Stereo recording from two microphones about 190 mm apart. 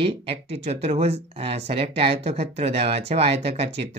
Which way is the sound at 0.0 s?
30° right (ahead or behind).